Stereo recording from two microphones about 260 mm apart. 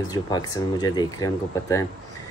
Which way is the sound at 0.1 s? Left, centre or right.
Centre.